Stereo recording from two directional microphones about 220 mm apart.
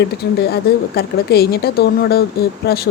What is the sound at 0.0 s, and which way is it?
Speech, 45° left (ahead or behind).